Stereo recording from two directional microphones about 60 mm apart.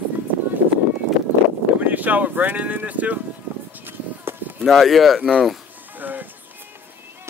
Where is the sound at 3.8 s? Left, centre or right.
Right.